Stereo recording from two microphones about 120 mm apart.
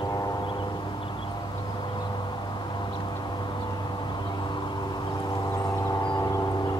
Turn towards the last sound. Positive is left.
turn(degrees=35)  # may be behind; listen again after turning